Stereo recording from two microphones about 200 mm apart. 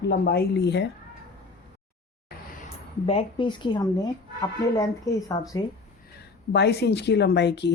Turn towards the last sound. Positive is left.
turn(degrees=60)  # may be behind; listen again after turning